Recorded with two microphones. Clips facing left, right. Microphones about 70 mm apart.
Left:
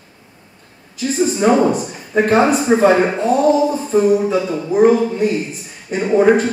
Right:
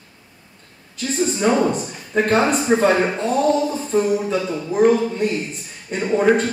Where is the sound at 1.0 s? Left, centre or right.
Centre.